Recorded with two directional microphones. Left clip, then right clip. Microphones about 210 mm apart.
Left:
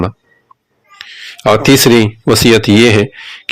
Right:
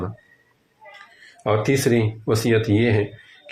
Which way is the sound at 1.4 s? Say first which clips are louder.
Left 12 dB; 45° left (ahead or behind).